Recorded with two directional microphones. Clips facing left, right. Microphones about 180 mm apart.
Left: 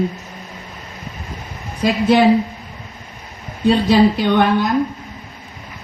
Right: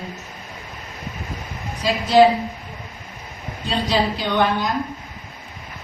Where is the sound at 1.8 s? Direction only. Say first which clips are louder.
Left 5 dB; 55° left (ahead or behind).